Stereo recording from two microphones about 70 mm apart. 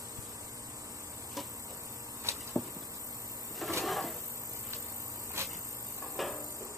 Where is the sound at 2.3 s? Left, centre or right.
Right.